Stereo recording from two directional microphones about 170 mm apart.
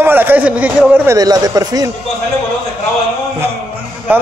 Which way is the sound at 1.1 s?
20° right (ahead or behind).